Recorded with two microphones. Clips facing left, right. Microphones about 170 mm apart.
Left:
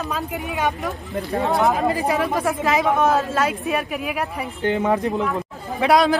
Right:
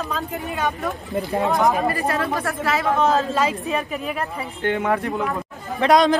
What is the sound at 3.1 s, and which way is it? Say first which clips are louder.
Speech: even; 5° left (ahead or behind).